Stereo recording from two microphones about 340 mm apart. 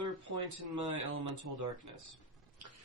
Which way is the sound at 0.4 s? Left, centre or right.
Right.